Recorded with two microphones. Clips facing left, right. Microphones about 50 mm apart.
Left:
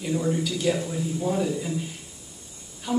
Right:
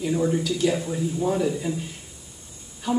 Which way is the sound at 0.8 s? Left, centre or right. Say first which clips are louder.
Right 2 dB; centre.